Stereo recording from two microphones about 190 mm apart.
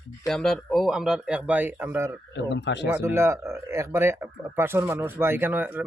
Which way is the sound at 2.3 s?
70° left (ahead or behind).